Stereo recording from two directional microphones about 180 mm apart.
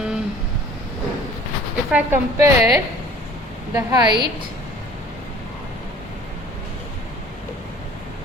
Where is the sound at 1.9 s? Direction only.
10° right (ahead or behind).